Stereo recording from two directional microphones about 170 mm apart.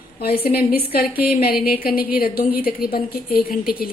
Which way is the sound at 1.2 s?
60° left (ahead or behind).